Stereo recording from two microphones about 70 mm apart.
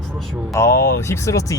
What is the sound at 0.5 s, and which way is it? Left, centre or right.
Speech, left.